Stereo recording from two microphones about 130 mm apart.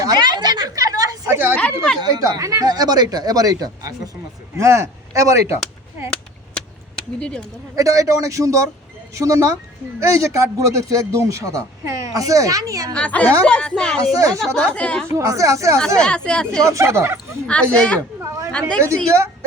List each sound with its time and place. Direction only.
0.0 s a sound: 30° right (ahead or behind)
1.3 s a sound: 15° right (ahead or behind)
1.5 s speech: 5° left (ahead or behind)
2.0 s speech: 30° right (ahead or behind)
7.2 s a woman's voice: 5° left (ahead or behind)
7.8 s speech: 25° right (ahead or behind)
12.9 s a woman's voice: 10° left (ahead or behind)
14.1 s speech: 25° right (ahead or behind)
14.4 s speech: 5° left (ahead or behind)
15.1 s speech: 25° right (ahead or behind)
16.0 s a woman's voice: 5° left (ahead or behind)
16.6 s speech: 20° right (ahead or behind)
17.4 s a woman's voice: 5° left (ahead or behind)
18.2 s speech: 20° right (ahead or behind)